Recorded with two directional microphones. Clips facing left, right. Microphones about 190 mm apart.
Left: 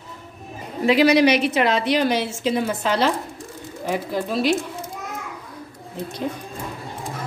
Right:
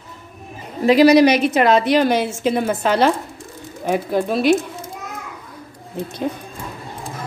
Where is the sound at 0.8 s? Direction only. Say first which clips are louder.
Right 5 dB; 40° right (ahead or behind).